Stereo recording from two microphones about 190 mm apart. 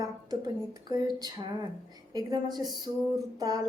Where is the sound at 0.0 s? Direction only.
20° right (ahead or behind).